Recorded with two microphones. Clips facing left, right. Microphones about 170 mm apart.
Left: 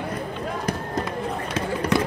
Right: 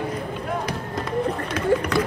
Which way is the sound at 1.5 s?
30° left (ahead or behind).